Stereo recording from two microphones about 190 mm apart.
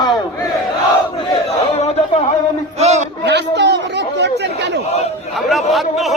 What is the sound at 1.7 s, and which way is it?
Speech, 35° left (ahead or behind).